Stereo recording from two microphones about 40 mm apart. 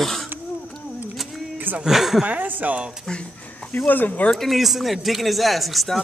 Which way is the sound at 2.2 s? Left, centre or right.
Right.